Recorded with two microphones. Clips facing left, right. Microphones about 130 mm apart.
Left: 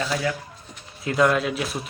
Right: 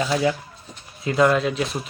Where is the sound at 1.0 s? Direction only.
Centre (ahead or behind).